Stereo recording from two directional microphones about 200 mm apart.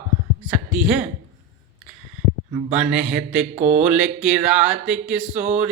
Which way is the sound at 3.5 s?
35° right (ahead or behind).